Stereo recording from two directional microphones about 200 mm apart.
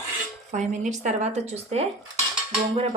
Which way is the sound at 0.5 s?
35° right (ahead or behind).